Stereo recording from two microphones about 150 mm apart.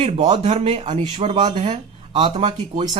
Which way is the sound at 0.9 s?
30° right (ahead or behind).